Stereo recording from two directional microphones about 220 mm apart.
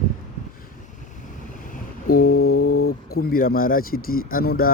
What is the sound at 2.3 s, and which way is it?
Mantra, 75° left (ahead or behind).